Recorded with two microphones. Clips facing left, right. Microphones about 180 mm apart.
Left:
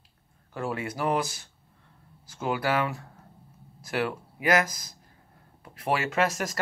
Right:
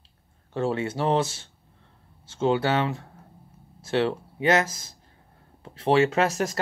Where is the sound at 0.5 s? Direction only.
30° right (ahead or behind).